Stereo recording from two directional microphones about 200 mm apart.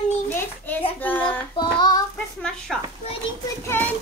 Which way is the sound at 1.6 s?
20° left (ahead or behind).